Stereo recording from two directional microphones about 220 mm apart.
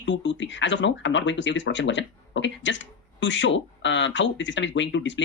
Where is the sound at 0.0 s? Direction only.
55° left (ahead or behind).